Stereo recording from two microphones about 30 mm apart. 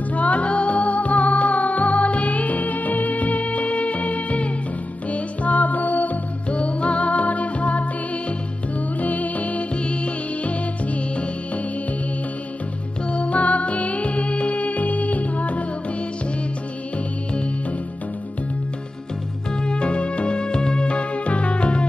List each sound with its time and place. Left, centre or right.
0.1 s music: left
6.5 s music: left
8.7 s music: left
9.8 s music: left
13.1 s music: left
19.6 s music: left